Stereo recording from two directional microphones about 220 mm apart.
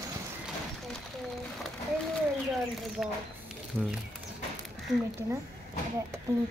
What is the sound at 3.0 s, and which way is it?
Snake, centre (ahead or behind).